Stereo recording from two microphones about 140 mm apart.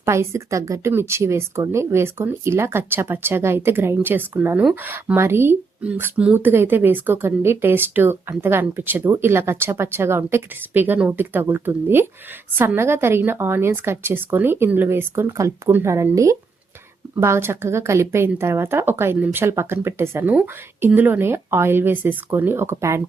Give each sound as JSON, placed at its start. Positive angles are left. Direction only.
{"t": 0.0, "sound": "speech", "side_deg": -20}